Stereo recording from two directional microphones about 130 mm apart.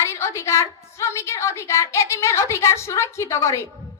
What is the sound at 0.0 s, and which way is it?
A child's voice, 20° left (ahead or behind).